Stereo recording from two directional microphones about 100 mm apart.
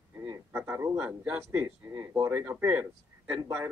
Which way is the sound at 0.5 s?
20° right (ahead or behind).